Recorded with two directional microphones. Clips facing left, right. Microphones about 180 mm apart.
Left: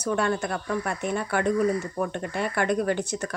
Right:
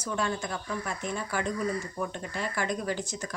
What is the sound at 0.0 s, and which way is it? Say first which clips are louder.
Speech: left 6 dB; 65° left (ahead or behind).